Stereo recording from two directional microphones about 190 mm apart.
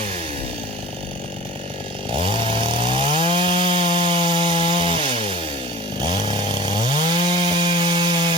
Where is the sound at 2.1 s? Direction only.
30° right (ahead or behind).